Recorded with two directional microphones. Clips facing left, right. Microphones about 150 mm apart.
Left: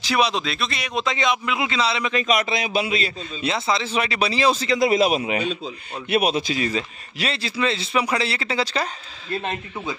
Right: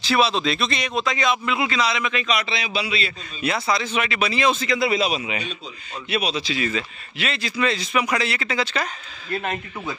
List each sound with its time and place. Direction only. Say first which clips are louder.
0.0 s speech: right 1 dB; 15° left (ahead or behind)
0.5 s speech: right 4 dB; 5° left (ahead or behind)
0.9 s a man's voice: left 1 dB; 20° left (ahead or behind)
2.2 s a man's voice: left 3 dB; 50° left (ahead or behind)
3.4 s a man's voice: even; 25° left (ahead or behind)